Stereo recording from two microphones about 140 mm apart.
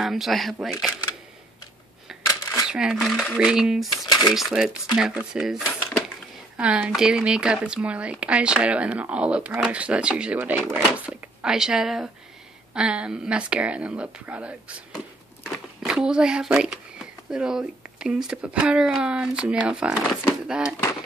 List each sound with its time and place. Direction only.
0.0 s speech: centre (ahead or behind)
2.2 s a sound: 25° left (ahead or behind)
2.7 s speech: 5° right (ahead or behind)
3.9 s a sound: 30° left (ahead or behind)
4.3 s speech: 5° right (ahead or behind)
15.9 s speech: 5° right (ahead or behind)